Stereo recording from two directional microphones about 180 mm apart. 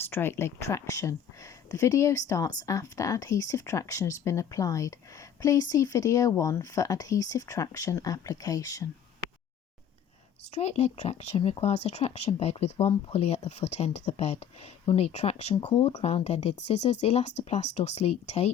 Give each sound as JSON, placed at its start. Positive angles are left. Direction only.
{"t": 0.1, "sound": "speech", "side_deg": 10}
{"t": 10.5, "sound": "speech", "side_deg": 35}